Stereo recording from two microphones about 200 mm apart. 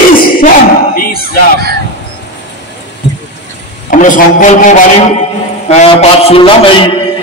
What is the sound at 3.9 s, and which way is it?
A man's voice, 40° left (ahead or behind).